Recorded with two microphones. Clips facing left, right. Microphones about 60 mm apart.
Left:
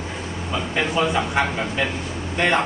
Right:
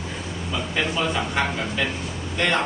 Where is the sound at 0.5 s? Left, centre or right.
Centre.